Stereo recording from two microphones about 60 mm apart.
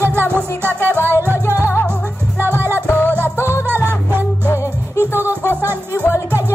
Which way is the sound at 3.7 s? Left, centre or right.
Right.